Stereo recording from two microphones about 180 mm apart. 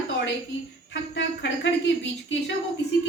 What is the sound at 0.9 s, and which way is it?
Speech, 80° left.